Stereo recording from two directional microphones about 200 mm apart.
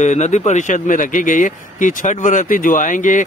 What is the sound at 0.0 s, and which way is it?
Speech, 35° left (ahead or behind).